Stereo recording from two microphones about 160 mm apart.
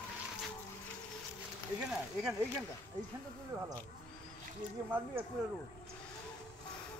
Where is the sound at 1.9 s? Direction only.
5° right (ahead or behind).